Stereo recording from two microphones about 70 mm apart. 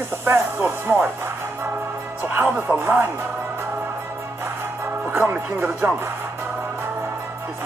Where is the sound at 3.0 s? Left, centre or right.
Right.